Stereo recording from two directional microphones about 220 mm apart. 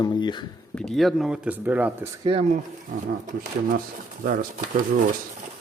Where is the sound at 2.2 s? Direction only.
25° right (ahead or behind).